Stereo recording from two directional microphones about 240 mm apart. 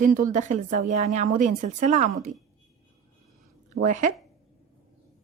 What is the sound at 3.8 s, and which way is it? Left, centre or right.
Speech, right.